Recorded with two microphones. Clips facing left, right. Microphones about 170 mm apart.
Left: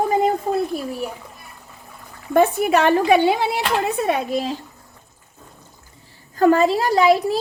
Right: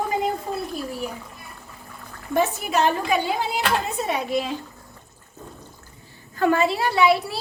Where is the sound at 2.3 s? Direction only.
55° left (ahead or behind).